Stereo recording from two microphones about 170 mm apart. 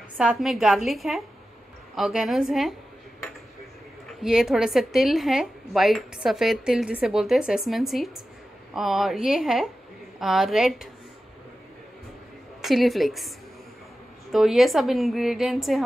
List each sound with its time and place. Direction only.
0.2 s speech: 5° right (ahead or behind)
4.2 s speech: 5° right (ahead or behind)
12.6 s speech: centre (ahead or behind)
14.3 s speech: centre (ahead or behind)